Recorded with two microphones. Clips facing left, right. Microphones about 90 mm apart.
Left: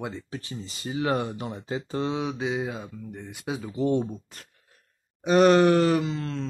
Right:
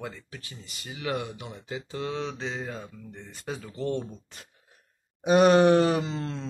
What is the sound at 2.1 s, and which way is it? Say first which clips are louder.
Speech: left 3 dB; 15° left (ahead or behind).